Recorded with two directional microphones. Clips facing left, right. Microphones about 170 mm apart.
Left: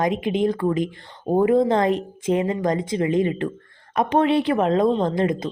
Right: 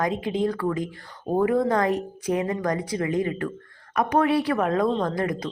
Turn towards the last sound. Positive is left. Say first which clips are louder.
# left 4 dB
turn(degrees=25)  # may be behind; listen again after turning